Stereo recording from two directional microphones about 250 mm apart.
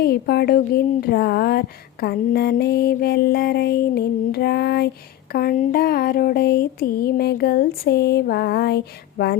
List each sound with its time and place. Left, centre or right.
0.0 s speech: left